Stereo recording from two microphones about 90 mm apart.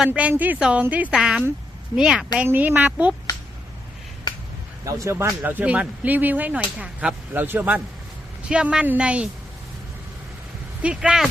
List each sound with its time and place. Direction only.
0.0 s speech: 15° right (ahead or behind)
2.5 s a woman's voice: 20° right (ahead or behind)
4.9 s speech: 35° right (ahead or behind)
5.4 s speech: 20° right (ahead or behind)
7.3 s a woman's voice: 20° right (ahead or behind)
8.4 s speech: 10° right (ahead or behind)
10.8 s speech: 5° right (ahead or behind)